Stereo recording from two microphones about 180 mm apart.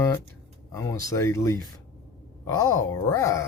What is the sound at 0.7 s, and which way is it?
Speech, 15° left (ahead or behind).